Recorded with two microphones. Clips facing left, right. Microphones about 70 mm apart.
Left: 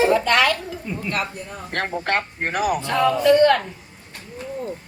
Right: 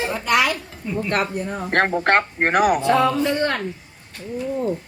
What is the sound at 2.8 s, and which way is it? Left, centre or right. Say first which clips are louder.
Speech: even; centre.